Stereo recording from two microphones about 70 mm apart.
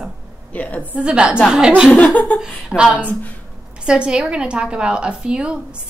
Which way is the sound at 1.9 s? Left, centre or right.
Left.